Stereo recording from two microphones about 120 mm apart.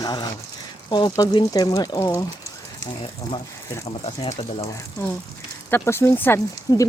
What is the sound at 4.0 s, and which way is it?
Speech, 55° left (ahead or behind).